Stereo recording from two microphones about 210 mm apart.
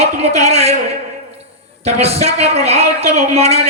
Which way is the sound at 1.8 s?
30° right (ahead or behind).